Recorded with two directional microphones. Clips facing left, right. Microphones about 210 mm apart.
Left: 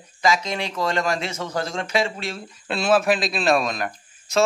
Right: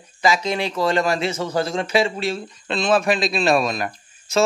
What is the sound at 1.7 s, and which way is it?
Speech, 30° right (ahead or behind).